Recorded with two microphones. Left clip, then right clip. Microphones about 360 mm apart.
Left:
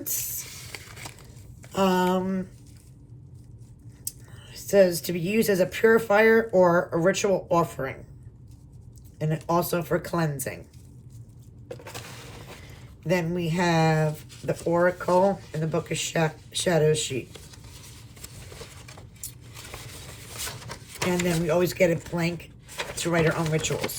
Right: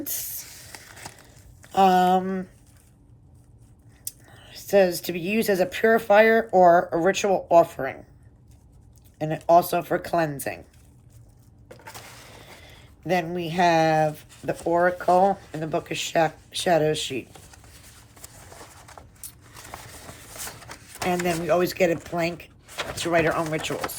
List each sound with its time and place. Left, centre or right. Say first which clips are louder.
0.0 s a sound: left 1 dB; centre
1.7 s speech: right 6 dB; centre
4.0 s speech: even; centre
9.1 s speech: right 7 dB; centre
13.1 s speech: right 1 dB; centre
21.1 s speech: right 3 dB; centre